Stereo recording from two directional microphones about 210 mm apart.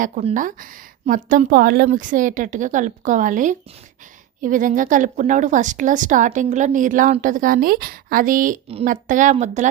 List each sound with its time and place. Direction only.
0.0 s a woman's voice: 35° right (ahead or behind)